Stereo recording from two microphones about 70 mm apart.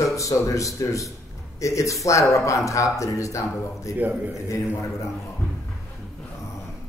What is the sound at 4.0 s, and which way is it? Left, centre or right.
Speech, right.